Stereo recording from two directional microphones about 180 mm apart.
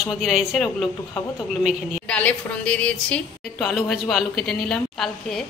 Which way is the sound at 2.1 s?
5° left (ahead or behind).